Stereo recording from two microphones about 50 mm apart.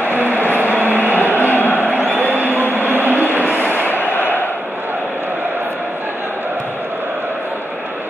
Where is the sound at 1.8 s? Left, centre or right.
Right.